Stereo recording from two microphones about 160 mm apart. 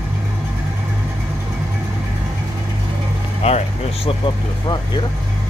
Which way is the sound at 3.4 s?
40° left (ahead or behind).